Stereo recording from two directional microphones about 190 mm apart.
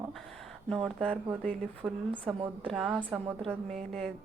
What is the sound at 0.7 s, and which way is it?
A woman's voice, centre (ahead or behind).